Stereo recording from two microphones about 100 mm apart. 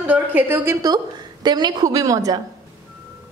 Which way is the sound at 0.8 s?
45° right (ahead or behind).